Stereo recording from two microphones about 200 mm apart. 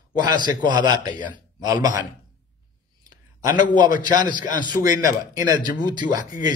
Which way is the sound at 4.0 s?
20° right (ahead or behind).